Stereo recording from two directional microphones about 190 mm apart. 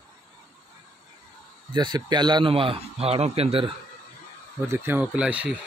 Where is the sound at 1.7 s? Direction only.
25° right (ahead or behind).